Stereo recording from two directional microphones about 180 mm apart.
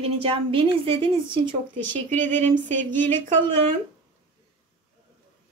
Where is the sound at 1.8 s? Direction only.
10° left (ahead or behind).